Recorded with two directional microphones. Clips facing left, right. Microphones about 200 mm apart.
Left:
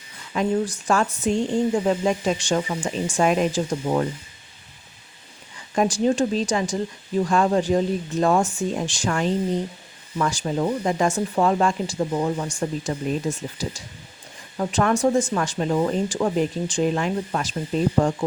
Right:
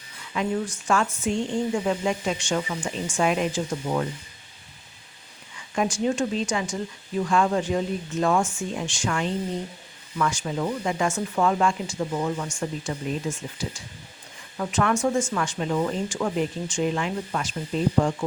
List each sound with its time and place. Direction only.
0.3 s speech: 35° left (ahead or behind)
5.7 s speech: 35° left (ahead or behind)